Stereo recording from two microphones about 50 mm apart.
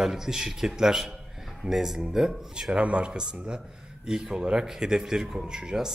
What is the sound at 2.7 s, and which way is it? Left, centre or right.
Speech, right.